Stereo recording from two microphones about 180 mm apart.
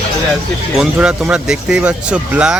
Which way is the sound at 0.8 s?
5° right (ahead or behind).